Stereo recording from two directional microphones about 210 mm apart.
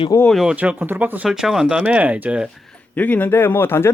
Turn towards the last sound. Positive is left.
turn(degrees=10)  # may be behind; listen again after turning